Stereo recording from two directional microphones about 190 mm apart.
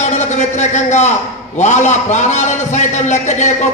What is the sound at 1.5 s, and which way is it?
A man's voice, 40° left (ahead or behind).